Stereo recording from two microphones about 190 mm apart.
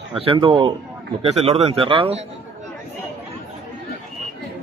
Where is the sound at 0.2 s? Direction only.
30° right (ahead or behind).